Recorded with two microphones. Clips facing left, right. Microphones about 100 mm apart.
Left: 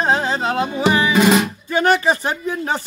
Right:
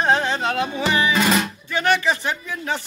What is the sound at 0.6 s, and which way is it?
Music, 20° left (ahead or behind).